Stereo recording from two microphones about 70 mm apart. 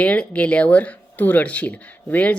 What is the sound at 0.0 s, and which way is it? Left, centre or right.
Speech, centre.